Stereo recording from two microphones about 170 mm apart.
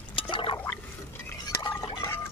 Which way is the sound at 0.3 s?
30° left (ahead or behind).